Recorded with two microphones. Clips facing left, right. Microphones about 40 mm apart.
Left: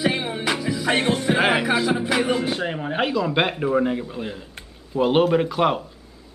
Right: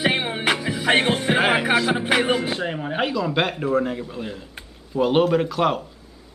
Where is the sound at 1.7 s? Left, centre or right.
Right.